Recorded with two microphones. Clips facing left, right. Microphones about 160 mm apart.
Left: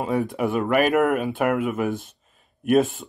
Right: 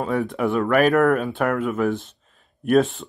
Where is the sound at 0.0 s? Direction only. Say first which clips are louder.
Right 1 dB; 15° left (ahead or behind).